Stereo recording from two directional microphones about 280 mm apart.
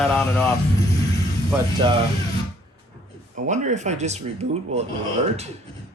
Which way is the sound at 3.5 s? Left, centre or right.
Right.